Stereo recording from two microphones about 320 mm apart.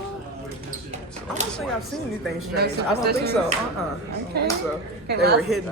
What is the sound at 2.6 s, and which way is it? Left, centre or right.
Speech, right.